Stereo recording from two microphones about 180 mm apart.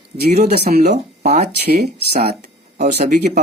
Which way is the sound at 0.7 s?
45° right (ahead or behind).